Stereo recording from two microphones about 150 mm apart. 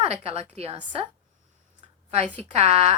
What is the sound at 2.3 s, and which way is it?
Speech, 45° right (ahead or behind).